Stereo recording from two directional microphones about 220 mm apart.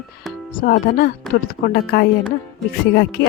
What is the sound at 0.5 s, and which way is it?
Speech, 40° left (ahead or behind).